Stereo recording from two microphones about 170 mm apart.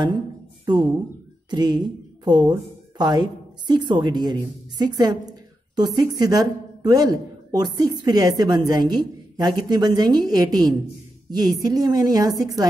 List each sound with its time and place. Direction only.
0.7 s a woman's voice: 25° right (ahead or behind)